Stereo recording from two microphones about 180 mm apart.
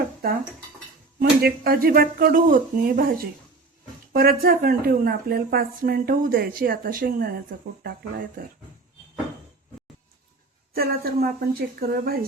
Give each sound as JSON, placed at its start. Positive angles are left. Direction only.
{"t": 1.2, "sound": "a woman's voice", "side_deg": -55}
{"t": 8.4, "sound": "speech", "side_deg": -50}
{"t": 10.8, "sound": "a woman's voice", "side_deg": -55}